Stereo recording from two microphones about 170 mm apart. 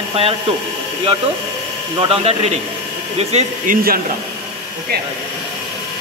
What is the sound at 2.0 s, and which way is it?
Speech, 35° right (ahead or behind).